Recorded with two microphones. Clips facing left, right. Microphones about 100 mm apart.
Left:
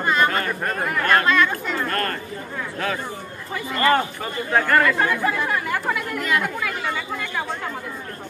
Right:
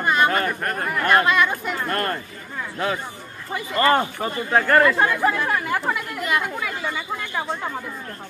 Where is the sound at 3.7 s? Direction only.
25° right (ahead or behind).